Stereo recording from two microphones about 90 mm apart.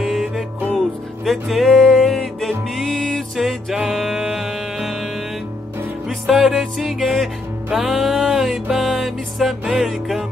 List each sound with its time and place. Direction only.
0.0 s music: 5° right (ahead or behind)
6.0 s music: centre (ahead or behind)